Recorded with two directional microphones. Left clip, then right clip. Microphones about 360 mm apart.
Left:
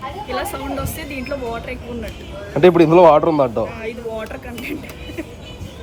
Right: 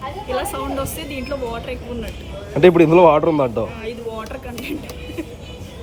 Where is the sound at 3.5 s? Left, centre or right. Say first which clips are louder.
Left 2 dB; left.